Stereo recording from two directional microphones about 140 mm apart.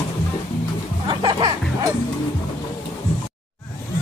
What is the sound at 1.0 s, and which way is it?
Music, 35° right (ahead or behind).